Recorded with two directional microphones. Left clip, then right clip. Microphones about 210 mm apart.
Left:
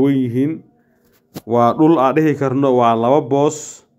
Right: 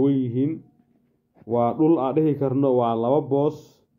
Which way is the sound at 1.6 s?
25° left (ahead or behind).